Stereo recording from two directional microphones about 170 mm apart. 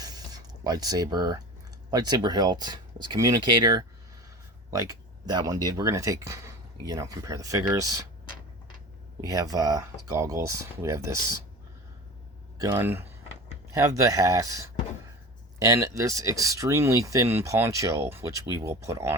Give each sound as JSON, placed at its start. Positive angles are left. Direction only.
{"t": 0.0, "sound": "a sound", "side_deg": -25}
{"t": 1.9, "sound": "speech", "side_deg": -25}
{"t": 9.2, "sound": "speech", "side_deg": -20}
{"t": 12.5, "sound": "speech", "side_deg": -15}